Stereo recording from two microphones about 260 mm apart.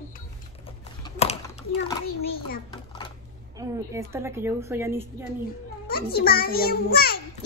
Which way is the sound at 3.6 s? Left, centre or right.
Centre.